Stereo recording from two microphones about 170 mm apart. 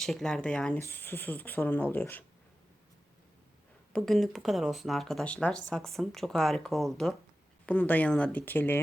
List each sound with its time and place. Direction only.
0.0 s speech: centre (ahead or behind)
3.9 s speech: centre (ahead or behind)